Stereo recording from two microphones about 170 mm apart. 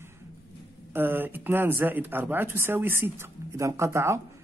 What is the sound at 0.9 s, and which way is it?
Speech, 10° right (ahead or behind).